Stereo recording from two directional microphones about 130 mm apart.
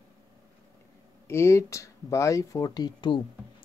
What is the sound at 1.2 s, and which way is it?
Speech, 20° left (ahead or behind).